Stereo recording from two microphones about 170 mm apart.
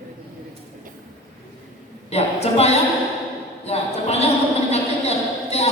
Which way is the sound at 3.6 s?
40° left (ahead or behind).